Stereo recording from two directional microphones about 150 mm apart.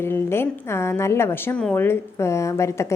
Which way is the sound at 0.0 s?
15° left (ahead or behind).